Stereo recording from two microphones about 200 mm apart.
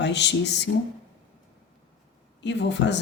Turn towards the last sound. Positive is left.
turn(degrees=60)  # may be behind; listen again after turning